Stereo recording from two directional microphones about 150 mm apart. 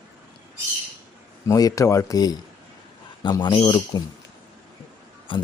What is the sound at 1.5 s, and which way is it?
Speech, 20° left (ahead or behind).